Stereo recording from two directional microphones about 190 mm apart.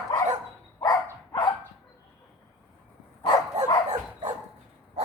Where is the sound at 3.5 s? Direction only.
40° right (ahead or behind).